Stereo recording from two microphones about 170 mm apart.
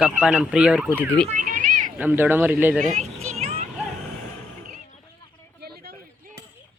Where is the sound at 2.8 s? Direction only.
45° right (ahead or behind).